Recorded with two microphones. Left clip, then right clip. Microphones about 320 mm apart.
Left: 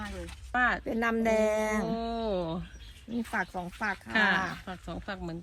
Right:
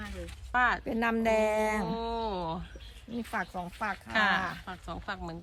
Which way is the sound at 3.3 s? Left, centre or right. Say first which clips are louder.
Left 1 dB; centre.